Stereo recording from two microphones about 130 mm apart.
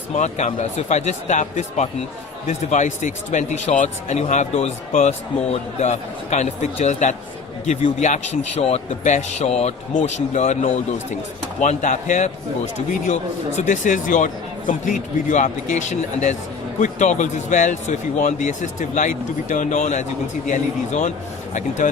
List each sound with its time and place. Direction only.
0.1 s a man's voice: 60° left (ahead or behind)
13.6 s a man's voice: 75° left (ahead or behind)